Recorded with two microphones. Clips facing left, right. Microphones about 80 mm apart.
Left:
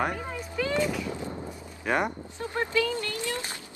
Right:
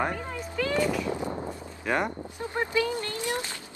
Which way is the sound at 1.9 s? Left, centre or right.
Centre.